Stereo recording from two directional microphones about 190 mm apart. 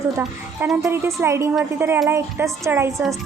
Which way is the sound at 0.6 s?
10° right (ahead or behind).